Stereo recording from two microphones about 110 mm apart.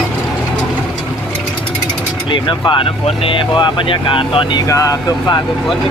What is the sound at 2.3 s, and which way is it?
Speech, 45° left (ahead or behind).